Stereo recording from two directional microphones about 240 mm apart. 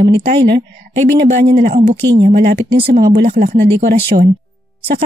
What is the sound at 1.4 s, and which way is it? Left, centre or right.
Speech, right.